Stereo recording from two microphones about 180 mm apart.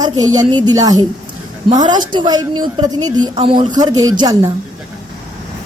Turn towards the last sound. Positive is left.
turn(degrees=-20)  # may be behind; listen again after turning